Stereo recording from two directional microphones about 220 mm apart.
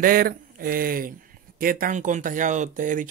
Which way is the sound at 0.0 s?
40° right (ahead or behind).